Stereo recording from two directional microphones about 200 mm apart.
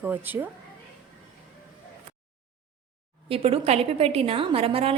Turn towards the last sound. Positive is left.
turn(degrees=-30)  # may be behind; listen again after turning